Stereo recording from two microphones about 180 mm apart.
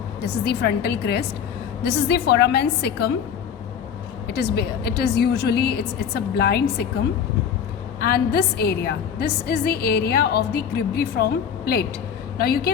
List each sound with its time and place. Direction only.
0.2 s a woman's voice: 65° left (ahead or behind)
4.3 s a woman's voice: 65° left (ahead or behind)
8.1 s a woman's voice: 60° left (ahead or behind)